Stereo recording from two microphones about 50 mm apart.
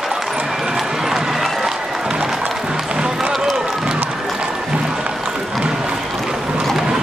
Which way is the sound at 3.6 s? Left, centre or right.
Centre.